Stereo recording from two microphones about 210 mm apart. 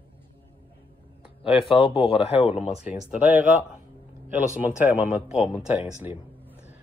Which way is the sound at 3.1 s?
5° right (ahead or behind).